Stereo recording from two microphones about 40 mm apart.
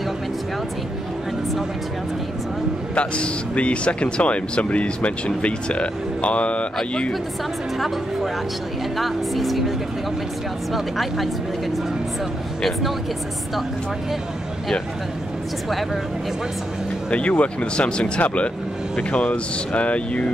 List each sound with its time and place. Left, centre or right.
2.9 s speech: left
8.9 s speech: centre
17.1 s speech: left
18.9 s speech: left